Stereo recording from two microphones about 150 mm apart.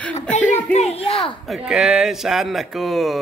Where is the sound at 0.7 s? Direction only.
40° left (ahead or behind).